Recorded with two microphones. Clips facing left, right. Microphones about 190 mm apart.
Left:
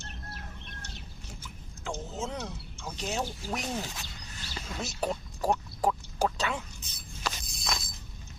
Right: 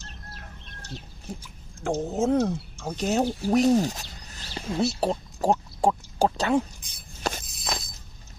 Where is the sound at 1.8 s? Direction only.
55° right (ahead or behind); by 6.4 s 30° right (ahead or behind).